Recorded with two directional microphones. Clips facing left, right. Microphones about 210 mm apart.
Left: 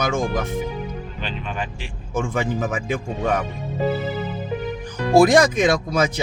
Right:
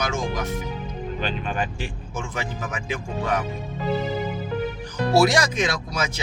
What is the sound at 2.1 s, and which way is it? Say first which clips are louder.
Speech: left 10 dB; 50° left (ahead or behind).